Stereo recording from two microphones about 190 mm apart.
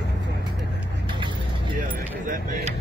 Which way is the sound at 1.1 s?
25° right (ahead or behind).